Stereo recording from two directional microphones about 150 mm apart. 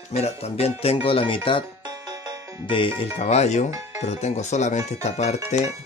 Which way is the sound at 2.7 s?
35° left (ahead or behind).